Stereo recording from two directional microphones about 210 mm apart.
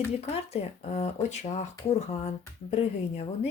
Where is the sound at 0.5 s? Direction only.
30° left (ahead or behind).